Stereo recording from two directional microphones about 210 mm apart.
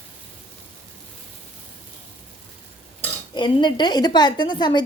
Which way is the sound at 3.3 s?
20° left (ahead or behind).